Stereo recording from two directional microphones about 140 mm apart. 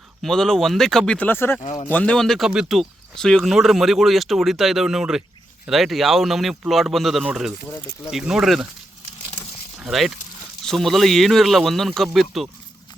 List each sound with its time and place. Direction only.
0.2 s speech: 5° left (ahead or behind)
1.6 s speech: 55° left (ahead or behind)
1.9 s speech: 10° left (ahead or behind)
9.8 s speech: centre (ahead or behind)